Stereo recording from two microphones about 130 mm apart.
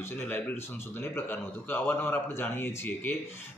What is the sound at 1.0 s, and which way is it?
Speech, 15° left (ahead or behind).